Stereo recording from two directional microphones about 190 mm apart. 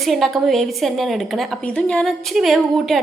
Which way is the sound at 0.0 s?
Centre (ahead or behind).